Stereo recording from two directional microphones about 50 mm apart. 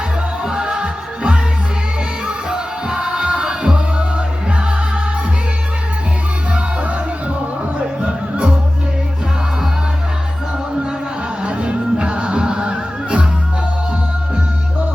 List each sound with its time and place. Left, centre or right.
0.4 s music: centre
6.5 s music: right
11.4 s music: right